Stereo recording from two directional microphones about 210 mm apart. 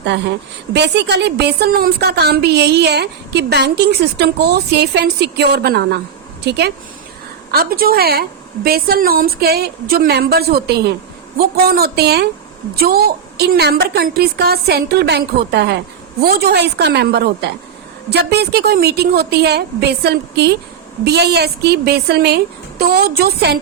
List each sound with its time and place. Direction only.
0.0 s a woman's voice: 55° right (ahead or behind)